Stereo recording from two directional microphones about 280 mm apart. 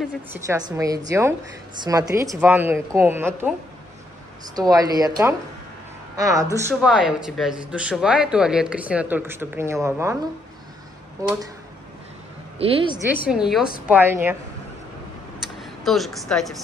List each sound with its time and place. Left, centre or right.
0.3 s a woman's voice: centre
4.6 s a woman's voice: centre
12.5 s speech: centre
13.3 s a woman's voice: centre
15.6 s a woman's voice: centre